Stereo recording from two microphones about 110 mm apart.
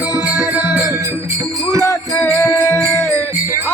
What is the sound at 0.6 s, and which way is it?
Music, 35° left (ahead or behind).